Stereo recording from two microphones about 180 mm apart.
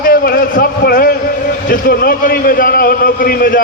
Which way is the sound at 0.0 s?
55° left (ahead or behind).